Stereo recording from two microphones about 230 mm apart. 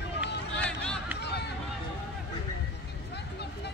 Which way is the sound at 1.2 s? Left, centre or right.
Left.